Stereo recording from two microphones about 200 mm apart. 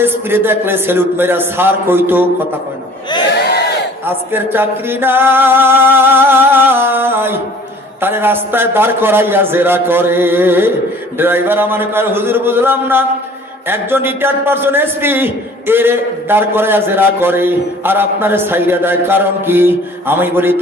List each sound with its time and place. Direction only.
0.0 s a man's voice: 10° right (ahead or behind)
3.5 s battle cry: 55° left (ahead or behind)
4.0 s a sound: 10° right (ahead or behind)
8.0 s a man's voice: 10° right (ahead or behind)